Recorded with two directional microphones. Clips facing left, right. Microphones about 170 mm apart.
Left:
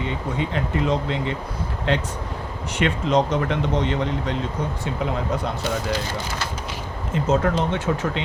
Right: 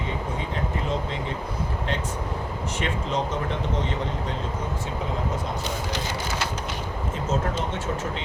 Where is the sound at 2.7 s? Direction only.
75° left (ahead or behind).